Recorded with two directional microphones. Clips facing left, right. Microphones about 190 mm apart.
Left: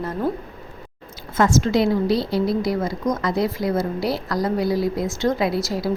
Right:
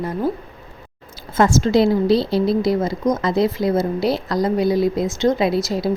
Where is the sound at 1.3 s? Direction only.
30° right (ahead or behind).